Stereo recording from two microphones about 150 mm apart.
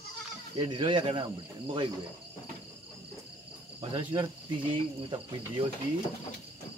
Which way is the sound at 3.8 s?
35° right (ahead or behind).